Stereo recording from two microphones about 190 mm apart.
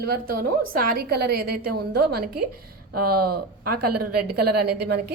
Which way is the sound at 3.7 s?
55° right (ahead or behind).